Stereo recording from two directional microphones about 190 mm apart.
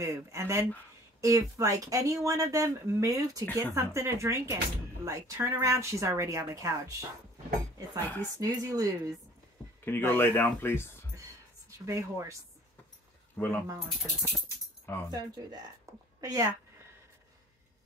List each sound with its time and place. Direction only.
0.0 s speech: 15° right (ahead or behind)
9.8 s speech: 10° left (ahead or behind)
11.8 s speech: 15° right (ahead or behind)
13.4 s speech: 10° left (ahead or behind)
15.0 s speech: 20° right (ahead or behind)